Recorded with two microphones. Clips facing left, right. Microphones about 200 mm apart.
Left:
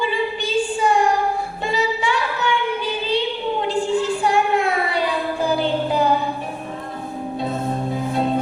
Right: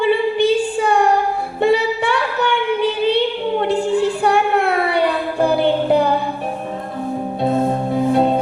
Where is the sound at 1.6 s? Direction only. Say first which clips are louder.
Right 7 dB; 60° right (ahead or behind).